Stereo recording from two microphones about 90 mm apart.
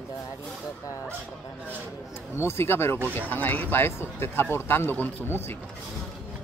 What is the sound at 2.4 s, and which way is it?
Speech, 25° left (ahead or behind).